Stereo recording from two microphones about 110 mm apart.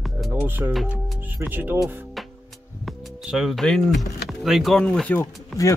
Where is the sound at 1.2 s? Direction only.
20° right (ahead or behind).